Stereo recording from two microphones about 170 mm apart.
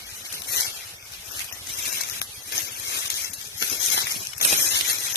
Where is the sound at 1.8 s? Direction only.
80° left.